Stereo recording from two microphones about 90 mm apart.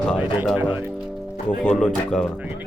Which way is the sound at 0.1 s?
10° left (ahead or behind).